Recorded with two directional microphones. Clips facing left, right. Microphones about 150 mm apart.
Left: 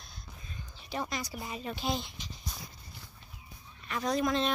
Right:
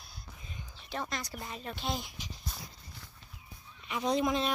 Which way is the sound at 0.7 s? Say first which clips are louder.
Left 2 dB; 5° left (ahead or behind).